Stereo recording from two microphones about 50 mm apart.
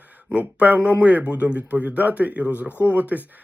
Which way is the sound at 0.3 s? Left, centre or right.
Right.